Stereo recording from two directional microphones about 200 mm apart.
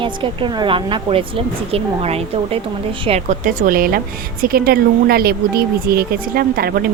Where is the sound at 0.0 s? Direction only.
25° right (ahead or behind).